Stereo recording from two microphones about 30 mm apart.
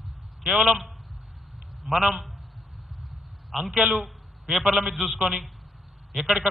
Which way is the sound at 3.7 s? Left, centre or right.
Right.